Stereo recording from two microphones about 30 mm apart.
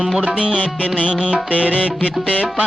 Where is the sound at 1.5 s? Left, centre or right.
Right.